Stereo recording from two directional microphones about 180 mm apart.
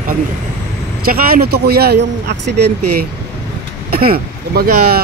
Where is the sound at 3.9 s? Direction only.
55° right (ahead or behind).